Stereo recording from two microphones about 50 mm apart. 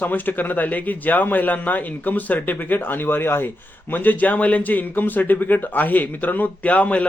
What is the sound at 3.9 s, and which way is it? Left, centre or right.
A man's voice, left.